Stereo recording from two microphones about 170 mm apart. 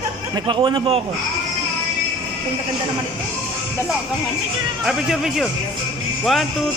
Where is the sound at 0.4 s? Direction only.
25° right (ahead or behind).